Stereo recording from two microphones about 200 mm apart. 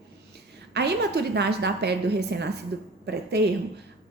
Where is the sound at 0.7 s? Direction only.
55° right (ahead or behind).